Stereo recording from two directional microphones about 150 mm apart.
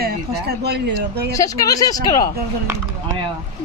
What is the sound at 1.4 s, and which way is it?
Speech, 25° left (ahead or behind).